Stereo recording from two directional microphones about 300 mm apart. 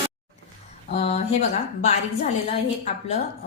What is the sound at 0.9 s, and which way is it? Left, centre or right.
A woman's voice, centre.